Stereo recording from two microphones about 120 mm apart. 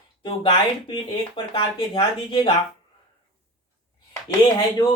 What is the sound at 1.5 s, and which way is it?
Speech, 50° left (ahead or behind).